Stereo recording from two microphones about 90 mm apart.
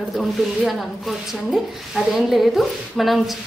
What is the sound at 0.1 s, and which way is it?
Speech, centre (ahead or behind).